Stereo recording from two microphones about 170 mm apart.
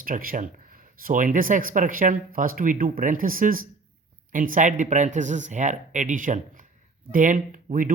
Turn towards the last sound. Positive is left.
turn(degrees=-50)  # may be behind; listen again after turning